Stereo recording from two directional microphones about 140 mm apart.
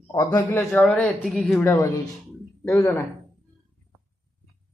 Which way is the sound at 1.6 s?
20° left (ahead or behind).